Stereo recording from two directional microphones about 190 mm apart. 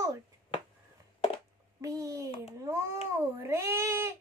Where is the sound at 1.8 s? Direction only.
15° right (ahead or behind).